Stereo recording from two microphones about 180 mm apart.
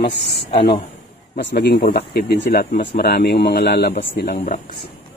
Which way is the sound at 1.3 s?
65° left (ahead or behind).